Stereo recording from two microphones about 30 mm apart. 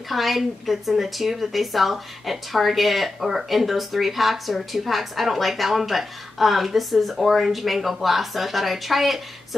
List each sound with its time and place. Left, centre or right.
0.1 s a woman's voice: centre